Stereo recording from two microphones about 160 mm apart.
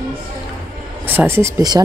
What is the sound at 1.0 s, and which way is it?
Speech, 15° right (ahead or behind).